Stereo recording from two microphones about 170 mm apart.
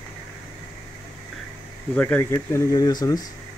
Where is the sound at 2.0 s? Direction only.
10° left (ahead or behind).